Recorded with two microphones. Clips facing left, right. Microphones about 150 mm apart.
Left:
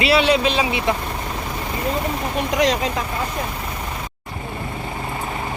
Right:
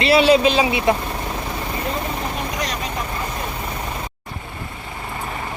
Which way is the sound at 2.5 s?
90° left.